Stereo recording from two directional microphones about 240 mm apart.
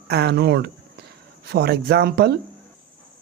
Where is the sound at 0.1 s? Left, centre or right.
Right.